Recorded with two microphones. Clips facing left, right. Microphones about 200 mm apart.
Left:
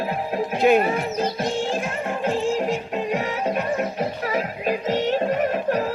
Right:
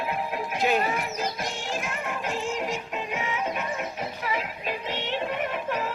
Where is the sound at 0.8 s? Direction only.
30° left (ahead or behind).